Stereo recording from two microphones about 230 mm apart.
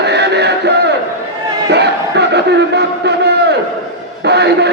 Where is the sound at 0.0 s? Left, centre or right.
Right.